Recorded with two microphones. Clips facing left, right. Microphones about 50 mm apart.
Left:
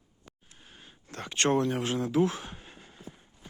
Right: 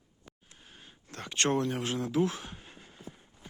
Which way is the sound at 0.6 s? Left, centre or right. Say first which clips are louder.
Left 1 dB; centre.